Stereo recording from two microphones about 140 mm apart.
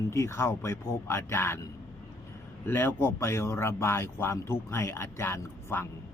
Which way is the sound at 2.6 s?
15° left (ahead or behind).